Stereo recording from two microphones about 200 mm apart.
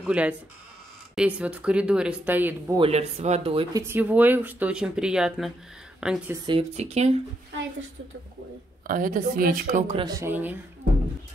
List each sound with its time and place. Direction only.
0.0 s speech: 5° right (ahead or behind)
2.8 s speech: 30° right (ahead or behind)
3.8 s a woman's voice: 10° right (ahead or behind)
6.4 s speech: 30° right (ahead or behind)
8.8 s speech: 45° right (ahead or behind); by 10.6 s 10° right (ahead or behind)